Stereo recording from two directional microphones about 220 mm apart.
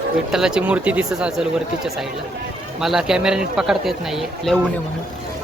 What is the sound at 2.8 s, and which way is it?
Speech, centre (ahead or behind).